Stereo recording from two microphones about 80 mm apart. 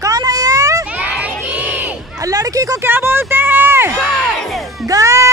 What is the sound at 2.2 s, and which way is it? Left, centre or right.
Speech, right.